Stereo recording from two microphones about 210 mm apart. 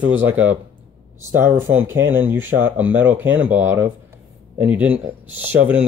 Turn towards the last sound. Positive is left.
turn(degrees=-5)  # may be behind; listen again after turning